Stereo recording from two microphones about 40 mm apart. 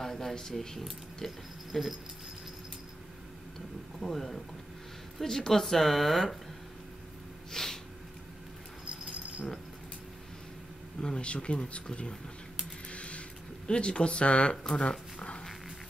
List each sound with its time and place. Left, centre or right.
0.0 s speech: centre
4.0 s speech: centre
7.5 s snort: centre
11.0 s speech: left
12.9 s vehicle: left
13.7 s speech: left
14.6 s a sound: centre